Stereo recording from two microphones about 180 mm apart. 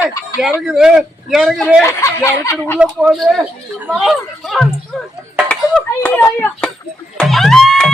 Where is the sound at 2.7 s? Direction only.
5° right (ahead or behind); by 6.7 s 10° left (ahead or behind).